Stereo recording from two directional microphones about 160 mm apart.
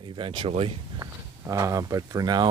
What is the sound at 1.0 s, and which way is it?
Speech, 20° right (ahead or behind).